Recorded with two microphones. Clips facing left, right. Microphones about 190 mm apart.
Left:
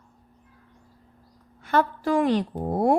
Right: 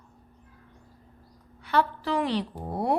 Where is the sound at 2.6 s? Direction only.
45° left (ahead or behind).